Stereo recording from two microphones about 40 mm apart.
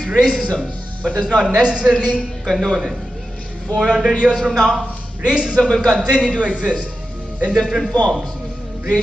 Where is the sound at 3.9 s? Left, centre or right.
Centre.